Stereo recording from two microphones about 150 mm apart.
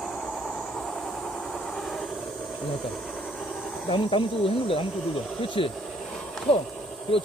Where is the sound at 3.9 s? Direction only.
35° left (ahead or behind).